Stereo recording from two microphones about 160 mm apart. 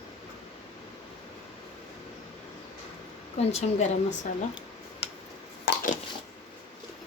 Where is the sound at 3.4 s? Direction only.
40° left (ahead or behind).